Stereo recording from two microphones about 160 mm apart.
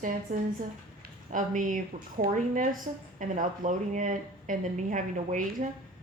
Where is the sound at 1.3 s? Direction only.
55° right (ahead or behind).